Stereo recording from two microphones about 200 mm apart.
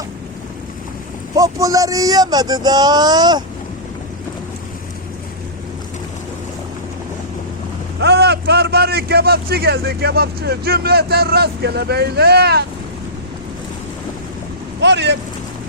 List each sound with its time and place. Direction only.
1.4 s speech: 15° right (ahead or behind)
8.0 s a man's voice: 55° right (ahead or behind)
14.8 s speech: 60° right (ahead or behind)